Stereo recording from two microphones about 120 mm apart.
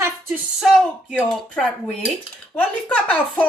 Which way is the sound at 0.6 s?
Centre (ahead or behind).